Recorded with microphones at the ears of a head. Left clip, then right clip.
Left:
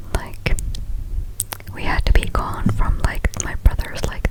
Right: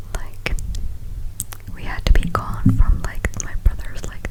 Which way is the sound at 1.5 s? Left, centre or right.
Left.